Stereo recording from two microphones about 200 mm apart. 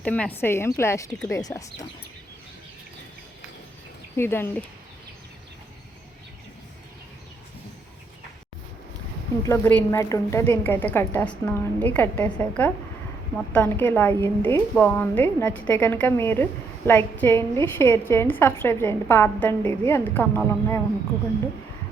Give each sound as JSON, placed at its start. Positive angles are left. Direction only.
{"t": 0.0, "sound": "a woman's voice", "side_deg": 10}
{"t": 4.2, "sound": "a woman's voice", "side_deg": 10}
{"t": 9.4, "sound": "a woman's voice", "side_deg": 10}